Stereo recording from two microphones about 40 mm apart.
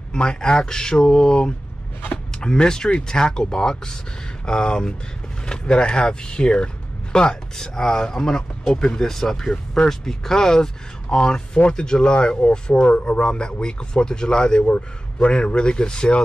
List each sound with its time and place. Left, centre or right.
0.1 s speech: left
9.0 s speech: centre; by 13.2 s left
13.2 s speech: centre